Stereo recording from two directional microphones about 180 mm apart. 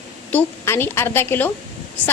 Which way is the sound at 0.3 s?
15° left (ahead or behind).